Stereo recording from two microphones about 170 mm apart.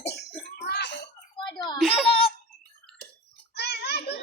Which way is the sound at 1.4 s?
25° left (ahead or behind).